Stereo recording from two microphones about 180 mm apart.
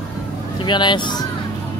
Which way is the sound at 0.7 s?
25° left (ahead or behind).